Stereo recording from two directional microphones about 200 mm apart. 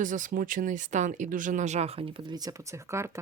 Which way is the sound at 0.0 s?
40° right (ahead or behind).